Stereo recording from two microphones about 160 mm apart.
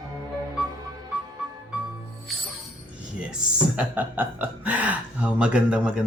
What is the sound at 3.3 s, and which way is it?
Speech, 5° right (ahead or behind).